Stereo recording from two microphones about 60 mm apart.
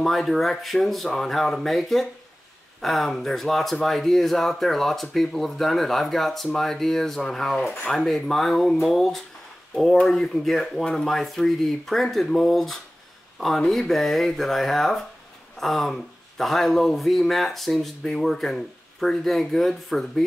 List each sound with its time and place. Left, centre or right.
0.0 s speech: centre